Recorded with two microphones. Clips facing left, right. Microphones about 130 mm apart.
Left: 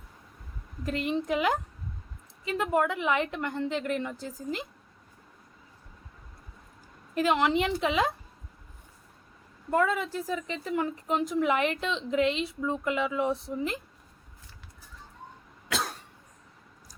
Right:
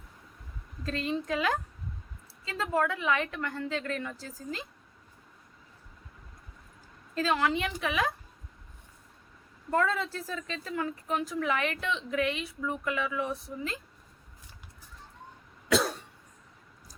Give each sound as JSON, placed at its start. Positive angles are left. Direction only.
{"t": 0.9, "sound": "speech", "side_deg": 15}
{"t": 7.1, "sound": "speech", "side_deg": 20}
{"t": 9.6, "sound": "speech", "side_deg": 15}